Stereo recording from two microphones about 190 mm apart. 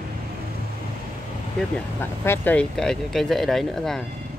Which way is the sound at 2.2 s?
10° left (ahead or behind).